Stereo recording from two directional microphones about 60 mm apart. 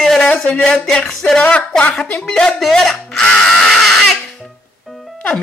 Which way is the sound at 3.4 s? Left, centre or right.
Centre.